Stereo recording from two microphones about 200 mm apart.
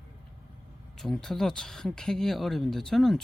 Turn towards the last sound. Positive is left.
turn(degrees=0)  # may be behind; listen again after turning